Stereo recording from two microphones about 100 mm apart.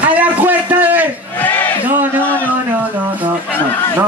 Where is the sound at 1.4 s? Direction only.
20° left (ahead or behind).